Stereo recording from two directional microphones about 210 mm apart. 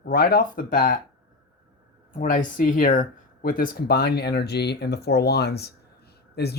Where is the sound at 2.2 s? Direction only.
40° left (ahead or behind).